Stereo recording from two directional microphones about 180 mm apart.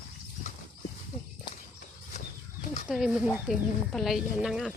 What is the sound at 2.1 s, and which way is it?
Bird flight, 45° left (ahead or behind).